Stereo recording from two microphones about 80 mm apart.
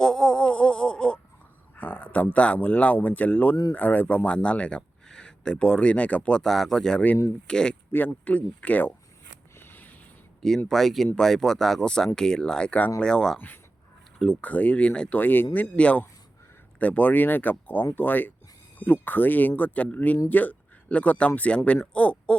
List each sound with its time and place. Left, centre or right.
0.0 s a sound: centre
1.7 s speech: left
7.9 s speech: left
9.6 s a sound: left
10.7 s speech: centre
14.3 s speech: centre
15.2 s speech: left